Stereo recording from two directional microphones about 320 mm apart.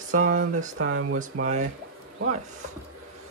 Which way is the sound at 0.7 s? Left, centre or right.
Right.